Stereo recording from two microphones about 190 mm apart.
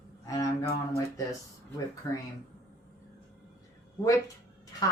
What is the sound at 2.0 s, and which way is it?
Speech, 20° left (ahead or behind).